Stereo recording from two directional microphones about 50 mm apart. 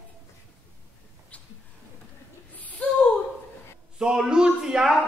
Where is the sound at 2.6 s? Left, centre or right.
Left.